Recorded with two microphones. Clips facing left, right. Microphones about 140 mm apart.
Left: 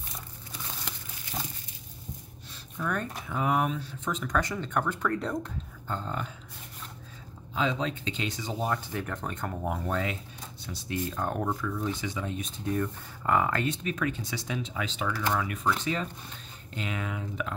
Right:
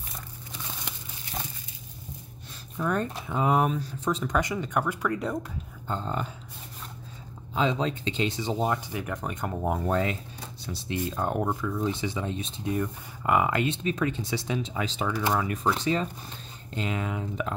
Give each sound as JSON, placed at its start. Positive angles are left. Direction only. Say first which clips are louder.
{"t": 2.8, "sound": "speech", "louder": "right 4 dB", "side_deg": -30}
{"t": 4.3, "sound": "speech", "louder": "right 2 dB", "side_deg": -20}
{"t": 5.9, "sound": "speech", "louder": "right 3 dB", "side_deg": -30}
{"t": 7.5, "sound": "speech", "louder": "right 3 dB", "side_deg": -30}
{"t": 8.7, "sound": "speech", "louder": "right 1 dB", "side_deg": -10}
{"t": 9.7, "sound": "speech", "louder": "right 5 dB", "side_deg": -35}